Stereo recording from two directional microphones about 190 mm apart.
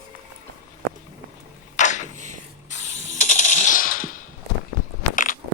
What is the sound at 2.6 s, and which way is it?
Ratchet, 40° left (ahead or behind).